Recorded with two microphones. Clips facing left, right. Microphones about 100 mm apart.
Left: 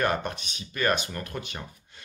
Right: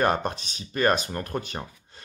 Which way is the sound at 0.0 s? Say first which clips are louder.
Right 3 dB; 30° right (ahead or behind).